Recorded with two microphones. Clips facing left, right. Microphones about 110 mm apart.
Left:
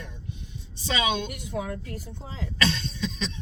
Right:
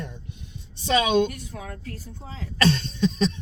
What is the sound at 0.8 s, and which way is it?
Speech, 45° right (ahead or behind).